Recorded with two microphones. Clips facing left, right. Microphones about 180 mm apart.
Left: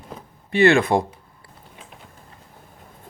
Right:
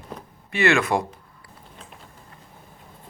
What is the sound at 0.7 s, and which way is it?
Speech, 30° left (ahead or behind).